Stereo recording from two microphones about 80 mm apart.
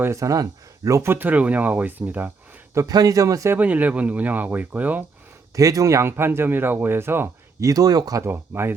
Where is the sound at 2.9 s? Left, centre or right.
Right.